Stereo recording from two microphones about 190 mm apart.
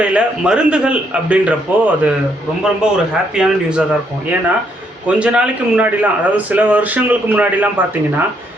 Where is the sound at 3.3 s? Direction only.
5° right (ahead or behind).